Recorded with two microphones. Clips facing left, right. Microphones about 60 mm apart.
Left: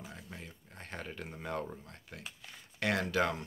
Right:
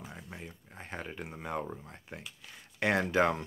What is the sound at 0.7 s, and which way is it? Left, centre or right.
Speech, centre.